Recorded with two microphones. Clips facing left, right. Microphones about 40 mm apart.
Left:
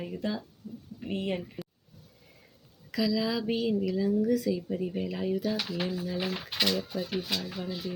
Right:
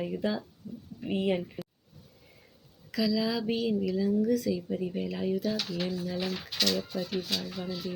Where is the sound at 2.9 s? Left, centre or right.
Centre.